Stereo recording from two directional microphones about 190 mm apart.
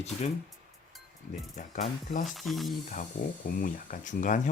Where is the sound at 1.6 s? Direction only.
45° left (ahead or behind).